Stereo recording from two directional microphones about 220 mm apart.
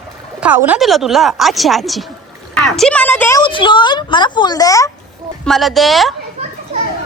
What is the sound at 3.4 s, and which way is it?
Speech, 20° left (ahead or behind).